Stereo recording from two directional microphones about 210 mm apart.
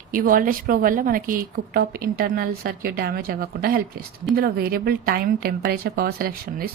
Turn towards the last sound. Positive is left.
turn(degrees=-45)  # may be behind; listen again after turning